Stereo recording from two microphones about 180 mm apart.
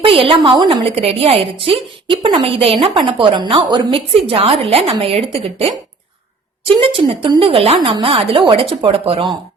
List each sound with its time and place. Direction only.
0.0 s a woman's voice: 30° right (ahead or behind)